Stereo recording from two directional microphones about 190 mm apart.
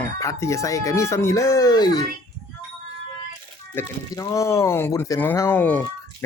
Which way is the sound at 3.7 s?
15° left (ahead or behind).